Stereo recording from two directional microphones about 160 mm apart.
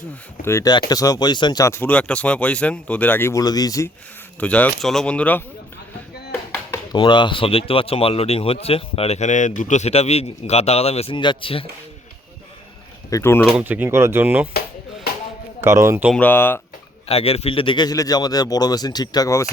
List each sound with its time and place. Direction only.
0.4 s speech: 15° left (ahead or behind)
4.4 s speech: 10° left (ahead or behind)
6.9 s speech: 30° left (ahead or behind)
13.1 s speech: 20° left (ahead or behind)
13.4 s speech: 5° right (ahead or behind)
15.6 s speech: 15° right (ahead or behind)
16.1 s speech: 10° left (ahead or behind)
17.1 s speech: 40° left (ahead or behind); by 19.5 s 20° left (ahead or behind)